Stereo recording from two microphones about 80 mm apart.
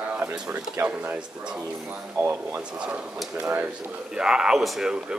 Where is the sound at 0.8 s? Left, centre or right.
Centre.